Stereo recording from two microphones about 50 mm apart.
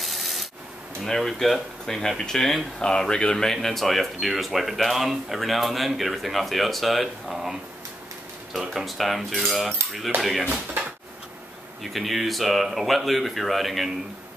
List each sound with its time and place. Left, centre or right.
0.0 s rub: centre
1.0 s speech: centre
3.6 s speech: centre
8.5 s speech: centre
10.1 s speech: right
11.8 s speech: centre